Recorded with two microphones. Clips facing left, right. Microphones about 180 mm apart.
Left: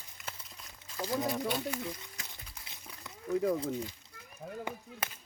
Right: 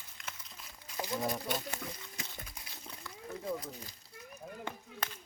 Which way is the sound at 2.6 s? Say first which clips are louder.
Right 1 dB; 20° left (ahead or behind).